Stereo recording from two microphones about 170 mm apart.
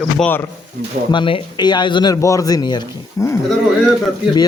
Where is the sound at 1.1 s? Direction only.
30° left (ahead or behind).